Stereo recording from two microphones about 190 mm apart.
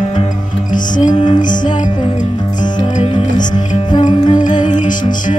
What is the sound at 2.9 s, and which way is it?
Music, 35° left (ahead or behind).